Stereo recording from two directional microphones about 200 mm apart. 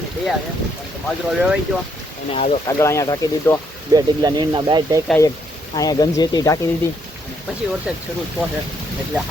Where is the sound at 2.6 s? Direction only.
15° left (ahead or behind).